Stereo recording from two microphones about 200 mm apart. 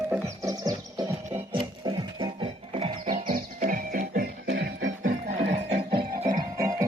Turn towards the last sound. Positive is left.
turn(degrees=-15)  # may be behind; listen again after turning